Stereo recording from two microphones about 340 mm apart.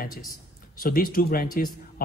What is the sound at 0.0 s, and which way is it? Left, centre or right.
Speech, left.